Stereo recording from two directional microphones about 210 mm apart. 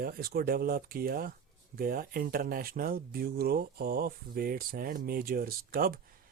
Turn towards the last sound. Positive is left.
turn(degrees=-45)  # may be behind; listen again after turning